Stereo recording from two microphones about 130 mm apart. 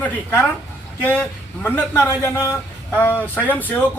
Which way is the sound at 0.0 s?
15° left (ahead or behind).